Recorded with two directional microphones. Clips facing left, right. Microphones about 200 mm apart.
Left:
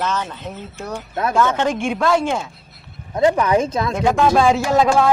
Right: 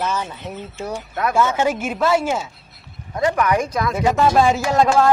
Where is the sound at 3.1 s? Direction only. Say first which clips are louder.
Left 3 dB; 25° left (ahead or behind).